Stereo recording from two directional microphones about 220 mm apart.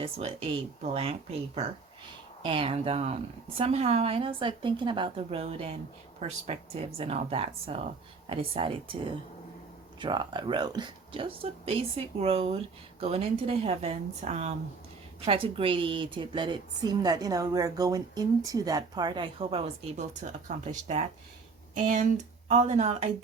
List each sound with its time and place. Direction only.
0.0 s a woman's voice: 25° right (ahead or behind)
10.0 s a woman's voice: 20° right (ahead or behind)